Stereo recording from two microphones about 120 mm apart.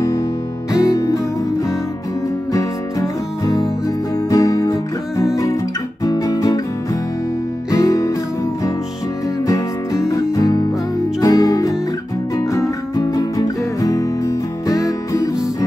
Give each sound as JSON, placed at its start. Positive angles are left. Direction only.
{"t": 0.7, "sound": "music", "side_deg": 30}
{"t": 2.5, "sound": "music", "side_deg": 30}
{"t": 6.0, "sound": "guitar", "side_deg": 30}
{"t": 7.7, "sound": "music", "side_deg": 30}
{"t": 9.5, "sound": "music", "side_deg": 25}